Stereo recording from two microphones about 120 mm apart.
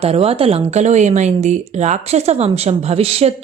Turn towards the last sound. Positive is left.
turn(degrees=-55)  # may be behind; listen again after turning